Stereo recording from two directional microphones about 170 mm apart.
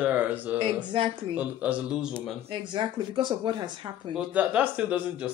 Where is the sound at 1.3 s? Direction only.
10° right (ahead or behind).